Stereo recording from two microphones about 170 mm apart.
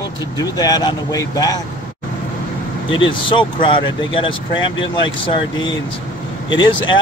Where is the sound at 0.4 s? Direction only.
20° left (ahead or behind).